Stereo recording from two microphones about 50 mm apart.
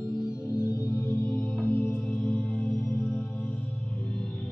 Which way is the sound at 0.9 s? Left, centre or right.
Left.